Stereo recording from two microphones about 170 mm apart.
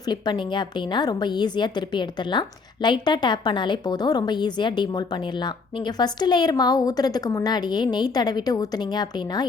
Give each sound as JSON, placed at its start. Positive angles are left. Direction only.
{"t": 0.1, "sound": "a woman's voice", "side_deg": 25}